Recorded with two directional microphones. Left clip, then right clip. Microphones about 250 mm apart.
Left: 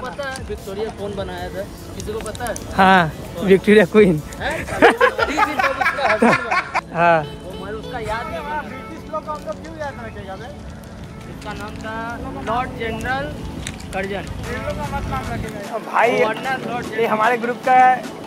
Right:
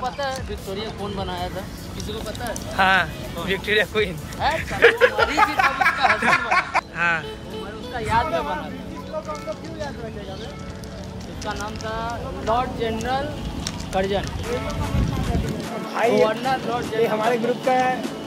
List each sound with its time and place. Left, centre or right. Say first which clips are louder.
0.2 s speech: even; centre
2.4 s speech: left 5 dB; left
5.1 s a sound: even; centre
7.0 s speech: left 9 dB; centre
11.4 s speech: right 1 dB; centre
16.1 s speech: even; centre